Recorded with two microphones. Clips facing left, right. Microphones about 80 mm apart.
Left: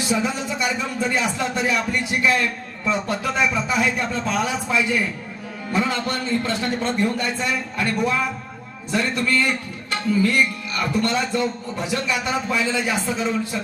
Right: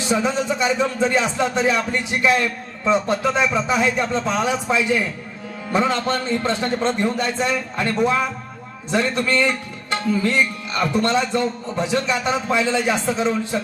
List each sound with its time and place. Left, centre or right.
0.1 s a man's voice: right